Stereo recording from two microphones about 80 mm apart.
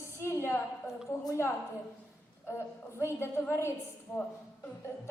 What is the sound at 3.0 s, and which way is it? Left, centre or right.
Music, left.